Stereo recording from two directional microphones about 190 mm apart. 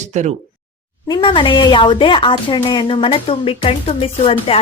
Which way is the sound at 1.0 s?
25° left (ahead or behind).